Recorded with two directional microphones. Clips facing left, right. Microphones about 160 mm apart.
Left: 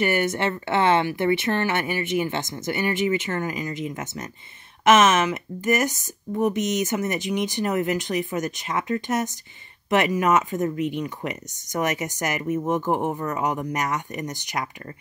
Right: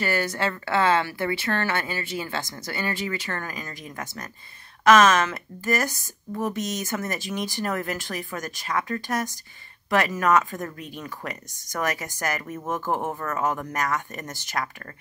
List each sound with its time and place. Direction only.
0.0 s speech: 20° left (ahead or behind)